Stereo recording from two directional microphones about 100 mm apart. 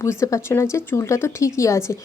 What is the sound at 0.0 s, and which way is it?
Speech, 30° left (ahead or behind).